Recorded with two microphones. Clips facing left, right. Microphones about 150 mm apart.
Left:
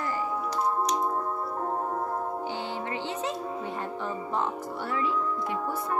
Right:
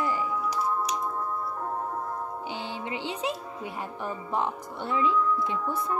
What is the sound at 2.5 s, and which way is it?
Music, 15° right (ahead or behind).